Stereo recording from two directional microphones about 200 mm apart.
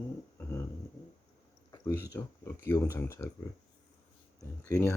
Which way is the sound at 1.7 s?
15° left (ahead or behind).